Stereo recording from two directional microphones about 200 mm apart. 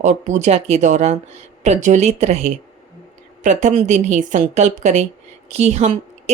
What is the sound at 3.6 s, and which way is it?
Speech, 35° right (ahead or behind).